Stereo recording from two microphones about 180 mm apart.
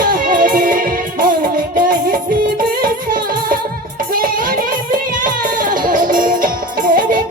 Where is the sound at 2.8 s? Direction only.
50° right (ahead or behind).